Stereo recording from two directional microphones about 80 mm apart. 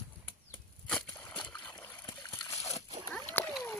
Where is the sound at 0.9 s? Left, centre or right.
Centre.